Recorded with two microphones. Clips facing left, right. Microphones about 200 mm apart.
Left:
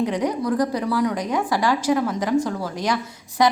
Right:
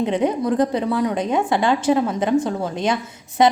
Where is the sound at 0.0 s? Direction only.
25° right (ahead or behind).